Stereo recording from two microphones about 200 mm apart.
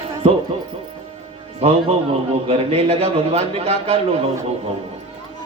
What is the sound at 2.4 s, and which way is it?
A man's voice, 30° right (ahead or behind).